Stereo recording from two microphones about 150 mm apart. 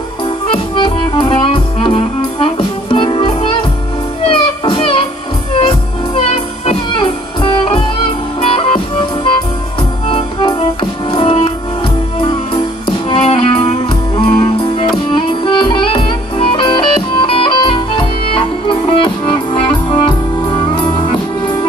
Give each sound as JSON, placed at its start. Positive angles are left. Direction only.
{"t": 0.7, "sound": "music", "side_deg": 35}
{"t": 8.4, "sound": "music", "side_deg": 40}
{"t": 12.8, "sound": "music", "side_deg": 40}